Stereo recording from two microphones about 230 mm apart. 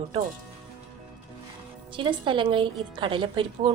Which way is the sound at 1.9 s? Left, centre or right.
Right.